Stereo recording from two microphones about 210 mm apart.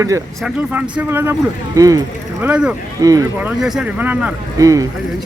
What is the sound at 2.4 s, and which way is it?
Speech, 5° right (ahead or behind).